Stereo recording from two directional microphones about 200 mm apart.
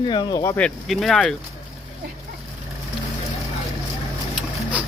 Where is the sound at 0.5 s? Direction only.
5° left (ahead or behind).